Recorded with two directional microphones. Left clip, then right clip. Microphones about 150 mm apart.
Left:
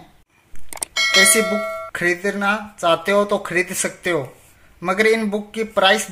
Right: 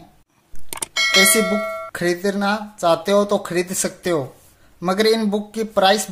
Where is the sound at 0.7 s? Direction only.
Centre (ahead or behind).